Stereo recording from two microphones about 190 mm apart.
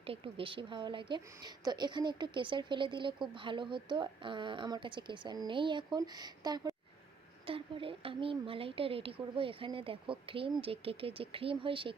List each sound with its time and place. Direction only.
0.0 s speech: 30° right (ahead or behind)